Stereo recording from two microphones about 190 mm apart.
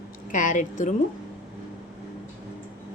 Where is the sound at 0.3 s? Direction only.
40° left (ahead or behind).